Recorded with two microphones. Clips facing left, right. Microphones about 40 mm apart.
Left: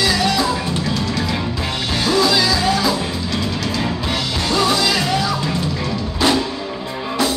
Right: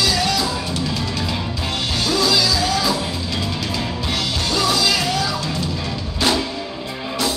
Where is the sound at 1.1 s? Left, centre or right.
Centre.